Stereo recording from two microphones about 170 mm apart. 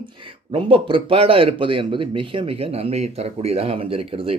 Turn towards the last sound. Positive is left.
turn(degrees=-35)  # may be behind; listen again after turning